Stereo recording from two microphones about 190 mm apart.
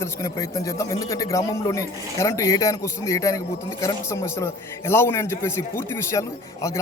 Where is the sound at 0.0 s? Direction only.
15° left (ahead or behind).